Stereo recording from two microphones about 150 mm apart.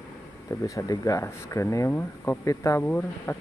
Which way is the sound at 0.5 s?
20° left (ahead or behind).